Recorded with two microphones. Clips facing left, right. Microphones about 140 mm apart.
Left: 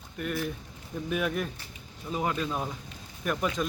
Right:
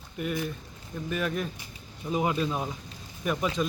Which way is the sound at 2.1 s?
10° right (ahead or behind).